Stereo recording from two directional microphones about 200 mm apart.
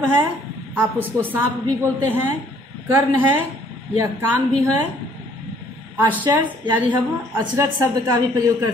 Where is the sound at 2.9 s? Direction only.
10° right (ahead or behind).